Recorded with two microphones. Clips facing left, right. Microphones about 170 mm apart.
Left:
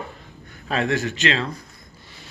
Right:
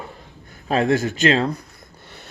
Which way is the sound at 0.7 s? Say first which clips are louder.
Right 4 dB; 35° right (ahead or behind).